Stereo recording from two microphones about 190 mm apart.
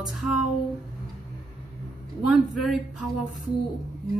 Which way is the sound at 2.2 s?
Centre (ahead or behind).